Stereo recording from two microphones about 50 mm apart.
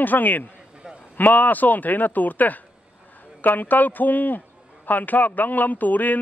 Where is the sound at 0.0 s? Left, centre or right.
Left.